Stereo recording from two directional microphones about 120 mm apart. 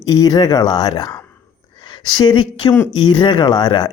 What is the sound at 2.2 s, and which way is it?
Speech, 40° left (ahead or behind).